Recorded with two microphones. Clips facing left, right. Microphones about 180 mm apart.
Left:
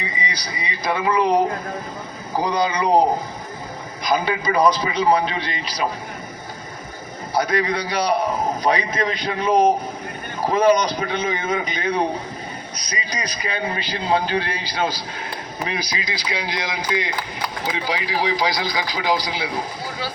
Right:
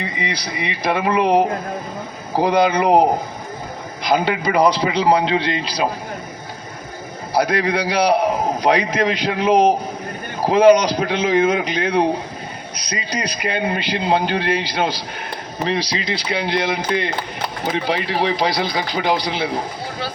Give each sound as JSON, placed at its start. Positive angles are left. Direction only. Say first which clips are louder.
{"t": 0.0, "sound": "speech", "louder": "right 4 dB", "side_deg": -60}
{"t": 2.4, "sound": "speech", "louder": "right 5 dB", "side_deg": -60}
{"t": 4.1, "sound": "a man's voice", "louder": "right 3 dB", "side_deg": -65}
{"t": 7.3, "sound": "a man's voice", "louder": "right 3 dB", "side_deg": -70}
{"t": 9.5, "sound": "speech", "louder": "right 2 dB", "side_deg": -20}
{"t": 10.5, "sound": "a man's voice", "louder": "right 5 dB", "side_deg": -75}
{"t": 15.5, "sound": "speech", "louder": "right 6 dB", "side_deg": -30}
{"t": 16.1, "sound": "speech", "louder": "right 7 dB", "side_deg": -60}
{"t": 19.3, "sound": "speech", "louder": "right 4 dB", "side_deg": -25}